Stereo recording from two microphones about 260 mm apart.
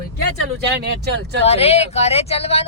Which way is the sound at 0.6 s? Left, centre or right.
Right.